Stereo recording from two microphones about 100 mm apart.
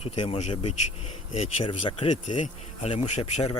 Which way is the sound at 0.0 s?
85° left.